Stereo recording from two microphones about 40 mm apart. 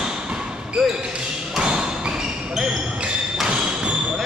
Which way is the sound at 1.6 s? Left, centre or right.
Right.